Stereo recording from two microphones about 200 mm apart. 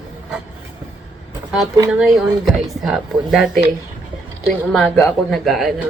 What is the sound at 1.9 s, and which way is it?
Speech, centre (ahead or behind).